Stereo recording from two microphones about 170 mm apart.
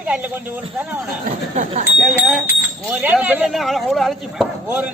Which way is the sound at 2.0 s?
Centre (ahead or behind).